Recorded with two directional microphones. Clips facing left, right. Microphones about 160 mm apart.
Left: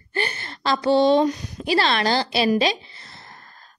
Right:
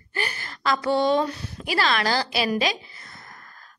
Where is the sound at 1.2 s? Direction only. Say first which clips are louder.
Left 8 dB; 15° left (ahead or behind).